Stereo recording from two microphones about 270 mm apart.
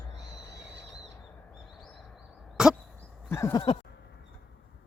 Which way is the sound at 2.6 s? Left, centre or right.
Centre.